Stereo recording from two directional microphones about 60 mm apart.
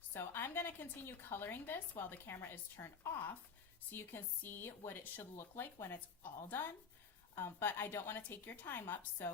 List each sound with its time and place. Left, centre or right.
0.1 s speech: left
7.3 s speech: left